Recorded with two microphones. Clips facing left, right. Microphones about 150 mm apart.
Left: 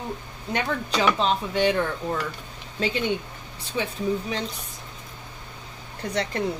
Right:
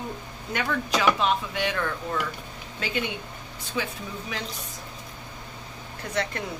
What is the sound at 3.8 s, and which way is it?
Speech, 30° left (ahead or behind).